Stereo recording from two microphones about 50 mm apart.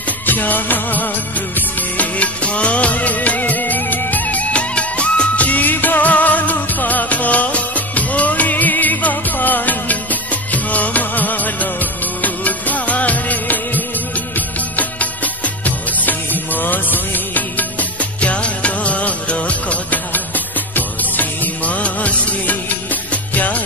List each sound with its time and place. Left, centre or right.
0.3 s music: left
1.8 s music of bollywood: left
14.3 s music: left